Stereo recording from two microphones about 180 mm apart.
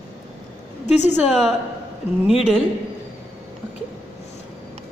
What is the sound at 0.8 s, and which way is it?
Speech, 40° left (ahead or behind).